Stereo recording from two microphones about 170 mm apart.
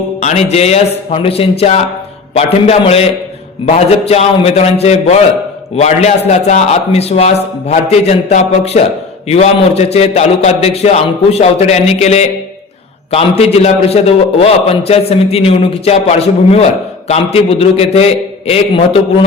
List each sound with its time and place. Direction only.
0.2 s a man's voice: 45° left (ahead or behind)